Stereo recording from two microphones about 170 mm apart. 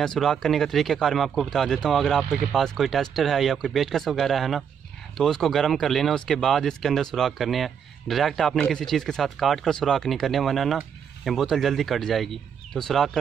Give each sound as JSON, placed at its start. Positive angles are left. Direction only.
{"t": 0.0, "sound": "speech", "side_deg": 5}